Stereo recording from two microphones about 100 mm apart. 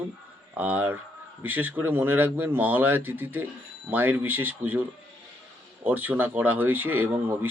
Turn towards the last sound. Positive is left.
turn(degrees=-20)  # may be behind; listen again after turning